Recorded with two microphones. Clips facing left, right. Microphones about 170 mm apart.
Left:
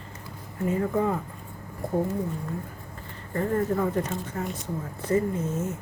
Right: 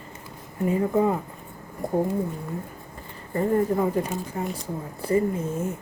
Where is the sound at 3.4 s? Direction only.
20° right (ahead or behind).